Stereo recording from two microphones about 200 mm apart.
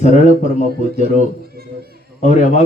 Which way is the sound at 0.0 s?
35° left (ahead or behind).